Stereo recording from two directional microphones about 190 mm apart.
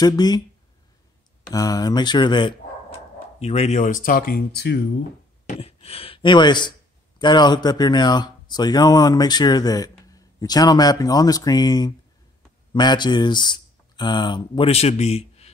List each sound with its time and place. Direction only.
0.0 s speech: 20° left (ahead or behind)
1.5 s speech: 20° left (ahead or behind)
3.3 s speech: 35° left (ahead or behind); by 4.8 s 60° left (ahead or behind)
5.5 s speech: 30° left (ahead or behind)